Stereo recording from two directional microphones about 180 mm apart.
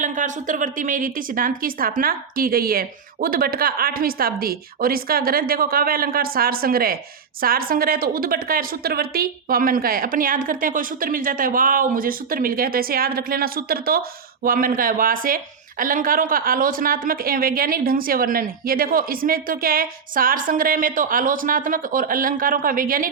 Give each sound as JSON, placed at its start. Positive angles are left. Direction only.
{"t": 0.0, "sound": "a woman's voice", "side_deg": -45}